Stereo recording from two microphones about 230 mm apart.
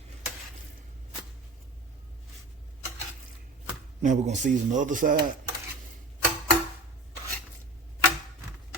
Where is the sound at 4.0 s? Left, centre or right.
Right.